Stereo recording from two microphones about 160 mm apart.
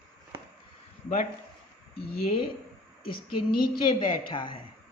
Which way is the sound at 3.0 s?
65° left (ahead or behind).